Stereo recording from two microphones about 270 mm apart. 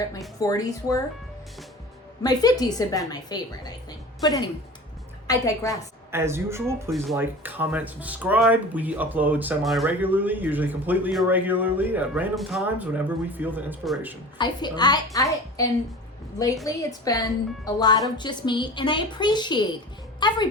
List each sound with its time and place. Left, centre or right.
0.3 s speech: centre
2.2 s a woman's voice: centre
6.1 s speech: centre
14.3 s speech: centre
16.6 s a woman's voice: centre